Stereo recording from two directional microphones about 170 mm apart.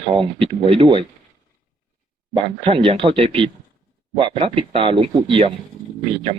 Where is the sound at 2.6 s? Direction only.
35° right (ahead or behind).